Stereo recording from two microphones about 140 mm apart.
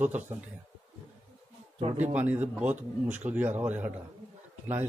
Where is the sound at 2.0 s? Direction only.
10° right (ahead or behind).